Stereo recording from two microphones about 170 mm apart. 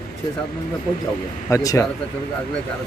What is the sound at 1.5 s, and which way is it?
Speech, 20° left (ahead or behind).